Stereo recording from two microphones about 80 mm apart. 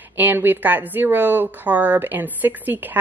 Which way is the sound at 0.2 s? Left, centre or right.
Right.